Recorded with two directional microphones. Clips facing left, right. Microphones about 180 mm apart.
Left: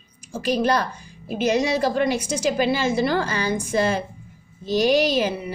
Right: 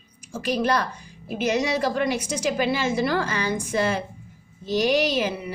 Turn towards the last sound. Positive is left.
turn(degrees=30)  # may be behind; listen again after turning